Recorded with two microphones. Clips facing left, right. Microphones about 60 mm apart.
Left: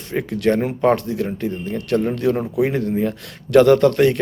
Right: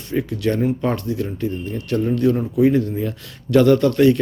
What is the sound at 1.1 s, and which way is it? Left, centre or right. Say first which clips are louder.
Speech: left 1 dB; left.